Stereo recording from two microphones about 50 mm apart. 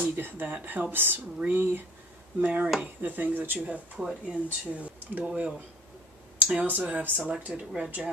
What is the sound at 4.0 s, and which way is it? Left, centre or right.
Speech, centre.